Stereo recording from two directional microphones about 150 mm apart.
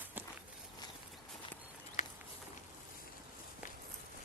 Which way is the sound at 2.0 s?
50° left (ahead or behind).